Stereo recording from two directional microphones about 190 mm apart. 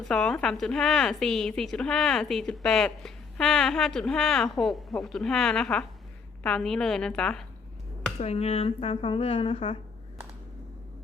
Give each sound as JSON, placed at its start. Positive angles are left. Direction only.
{"t": 0.1, "sound": "a woman's voice", "side_deg": 5}
{"t": 8.2, "sound": "a woman's voice", "side_deg": 35}